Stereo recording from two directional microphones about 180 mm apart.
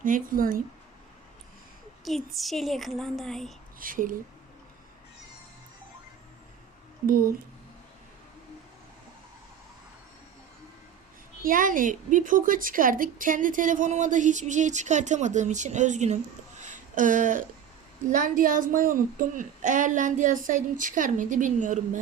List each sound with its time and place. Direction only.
0.0 s a woman's voice: 50° right (ahead or behind)
2.0 s speech: centre (ahead or behind)
3.8 s a woman's voice: 50° right (ahead or behind)
7.1 s a woman's voice: 55° right (ahead or behind)
11.4 s a woman's voice: 50° right (ahead or behind)
16.6 s a sound: 45° right (ahead or behind)
18.1 s a woman's voice: 50° right (ahead or behind)